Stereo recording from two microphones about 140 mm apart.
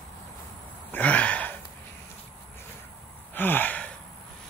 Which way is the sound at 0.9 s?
10° left (ahead or behind).